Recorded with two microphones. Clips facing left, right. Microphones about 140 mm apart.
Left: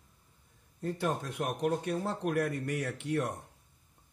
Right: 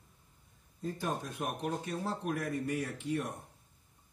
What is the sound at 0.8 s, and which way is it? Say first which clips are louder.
Speech: left 3 dB; 75° left (ahead or behind).